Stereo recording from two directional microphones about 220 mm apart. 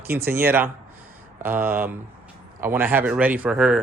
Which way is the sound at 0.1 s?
10° right (ahead or behind).